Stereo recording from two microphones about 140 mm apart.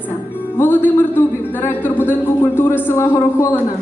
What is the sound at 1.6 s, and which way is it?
Speech, 15° left (ahead or behind).